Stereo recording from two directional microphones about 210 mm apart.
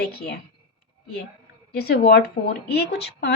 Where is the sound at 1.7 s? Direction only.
50° left (ahead or behind).